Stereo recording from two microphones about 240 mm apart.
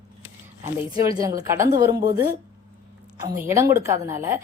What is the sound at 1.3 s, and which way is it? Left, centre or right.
Speech, centre.